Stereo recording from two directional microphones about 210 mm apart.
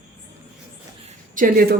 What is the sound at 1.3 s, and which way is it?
Speech, 40° right (ahead or behind).